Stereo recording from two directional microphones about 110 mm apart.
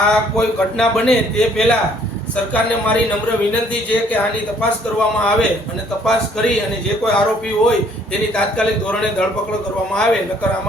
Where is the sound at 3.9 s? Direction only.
15° left (ahead or behind).